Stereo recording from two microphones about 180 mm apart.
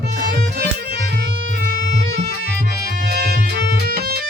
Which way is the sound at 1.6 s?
55° right (ahead or behind).